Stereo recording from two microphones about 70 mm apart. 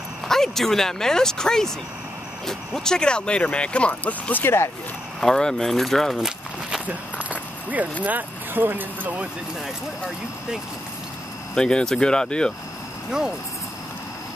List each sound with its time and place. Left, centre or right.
0.3 s speech: centre; by 4.6 s left
5.2 s speech: centre
6.1 s a sound: centre
6.9 s keys jangling: right
8.0 s speech: right
11.5 s speech: centre